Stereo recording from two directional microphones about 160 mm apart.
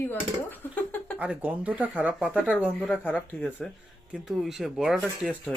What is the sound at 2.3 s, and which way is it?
Speech, 10° left (ahead or behind).